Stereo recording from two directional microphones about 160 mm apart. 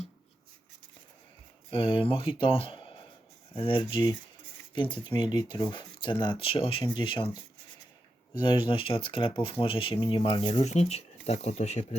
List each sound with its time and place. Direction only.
1.7 s speech: 35° left (ahead or behind)
8.4 s speech: 30° left (ahead or behind)